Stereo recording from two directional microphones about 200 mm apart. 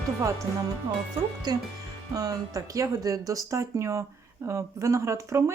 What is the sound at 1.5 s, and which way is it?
Speech, 20° right (ahead or behind).